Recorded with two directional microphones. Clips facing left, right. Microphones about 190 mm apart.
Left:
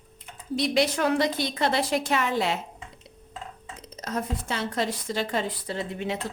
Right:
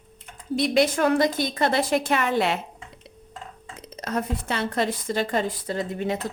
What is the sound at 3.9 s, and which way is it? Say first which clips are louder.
A woman's voice: right 3 dB; 65° right (ahead or behind).